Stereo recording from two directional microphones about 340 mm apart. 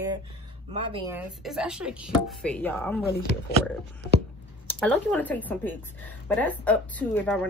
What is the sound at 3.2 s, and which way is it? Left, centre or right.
Speech, left.